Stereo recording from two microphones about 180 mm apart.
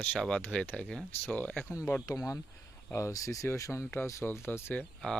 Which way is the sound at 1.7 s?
20° left (ahead or behind).